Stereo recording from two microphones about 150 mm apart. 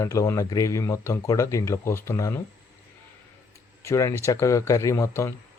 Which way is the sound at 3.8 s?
20° left (ahead or behind).